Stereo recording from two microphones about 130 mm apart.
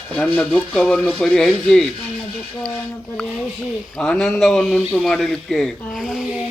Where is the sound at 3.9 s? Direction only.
5° left (ahead or behind).